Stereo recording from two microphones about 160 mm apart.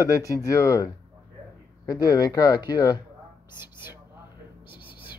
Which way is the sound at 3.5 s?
15° right (ahead or behind).